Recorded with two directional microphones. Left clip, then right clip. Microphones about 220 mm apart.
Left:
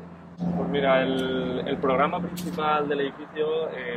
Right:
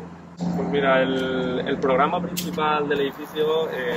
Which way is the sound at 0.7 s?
5° left (ahead or behind).